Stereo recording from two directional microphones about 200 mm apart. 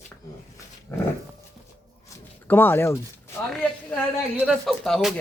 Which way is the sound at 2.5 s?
10° left (ahead or behind).